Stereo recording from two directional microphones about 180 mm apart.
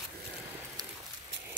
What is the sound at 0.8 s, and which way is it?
Horse, 20° right (ahead or behind).